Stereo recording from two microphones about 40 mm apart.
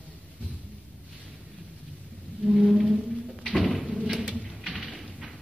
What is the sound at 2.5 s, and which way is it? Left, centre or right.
Music, centre.